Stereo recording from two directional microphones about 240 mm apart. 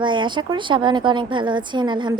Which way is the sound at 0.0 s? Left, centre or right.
Centre.